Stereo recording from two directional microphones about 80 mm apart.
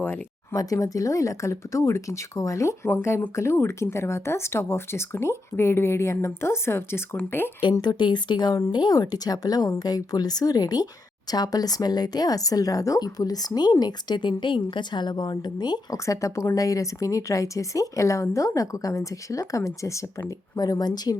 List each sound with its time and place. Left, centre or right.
0.5 s speech: left
7.6 s speech: left
16.0 s speech: left
20.6 s speech: left